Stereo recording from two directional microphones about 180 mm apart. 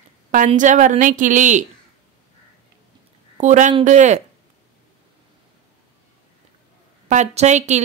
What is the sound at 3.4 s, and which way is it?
Speech, 40° right (ahead or behind).